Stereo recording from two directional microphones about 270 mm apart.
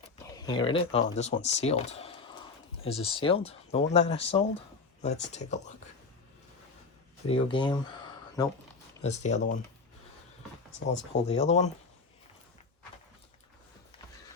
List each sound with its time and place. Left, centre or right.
0.3 s speech: centre
7.3 s speech: centre
9.0 s speech: left
10.8 s speech: left
11.3 s speech: left